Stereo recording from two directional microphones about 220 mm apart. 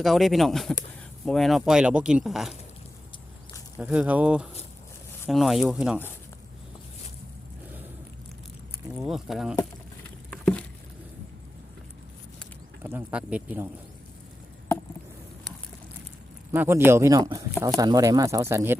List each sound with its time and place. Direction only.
0.0 s speech: centre (ahead or behind)
3.8 s speech: 5° right (ahead or behind)
9.0 s speech: centre (ahead or behind)
10.2 s patter: 5° left (ahead or behind)
12.8 s speech: 10° right (ahead or behind)
16.5 s speech: 10° right (ahead or behind)